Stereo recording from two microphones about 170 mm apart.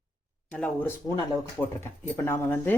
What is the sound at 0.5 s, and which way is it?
Speech, 10° left (ahead or behind).